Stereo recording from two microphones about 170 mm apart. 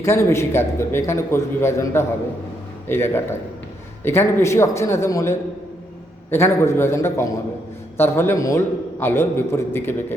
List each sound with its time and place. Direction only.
0.0 s a man's voice: 15° left (ahead or behind)